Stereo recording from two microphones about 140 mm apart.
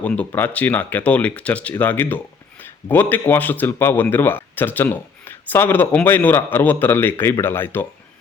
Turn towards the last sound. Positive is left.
turn(degrees=15)  # may be behind; listen again after turning